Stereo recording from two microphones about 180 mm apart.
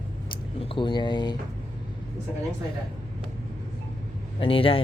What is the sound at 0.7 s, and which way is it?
Speech, 25° left (ahead or behind).